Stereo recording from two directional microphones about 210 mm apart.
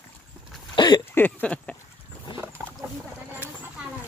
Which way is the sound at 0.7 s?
20° left (ahead or behind).